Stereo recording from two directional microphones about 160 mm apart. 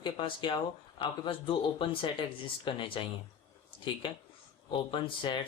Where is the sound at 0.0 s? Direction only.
30° left (ahead or behind).